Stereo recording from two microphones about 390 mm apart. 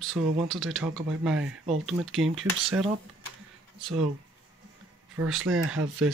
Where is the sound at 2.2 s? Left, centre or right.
Right.